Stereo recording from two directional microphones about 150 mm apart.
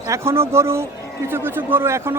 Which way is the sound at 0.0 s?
20° right (ahead or behind).